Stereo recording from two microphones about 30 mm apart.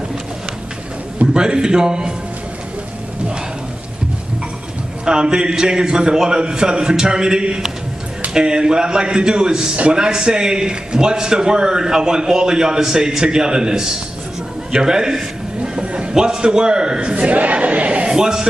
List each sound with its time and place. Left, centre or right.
1.2 s a man's voice: right
5.0 s a man's voice: right
14.7 s a sound: right
16.1 s a man's voice: right
17.1 s a sound: right
18.0 s a man's voice: right